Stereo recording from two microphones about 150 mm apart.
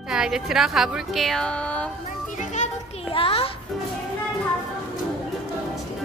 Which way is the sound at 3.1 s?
40° left (ahead or behind).